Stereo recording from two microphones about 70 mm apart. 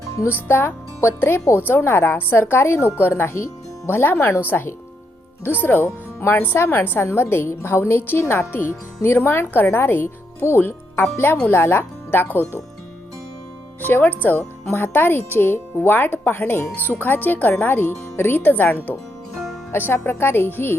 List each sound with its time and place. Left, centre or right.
0.3 s a woman's voice: left
13.8 s a woman's voice: left